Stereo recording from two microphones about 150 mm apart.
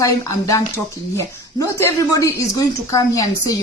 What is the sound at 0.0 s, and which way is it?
Speech, 25° left (ahead or behind).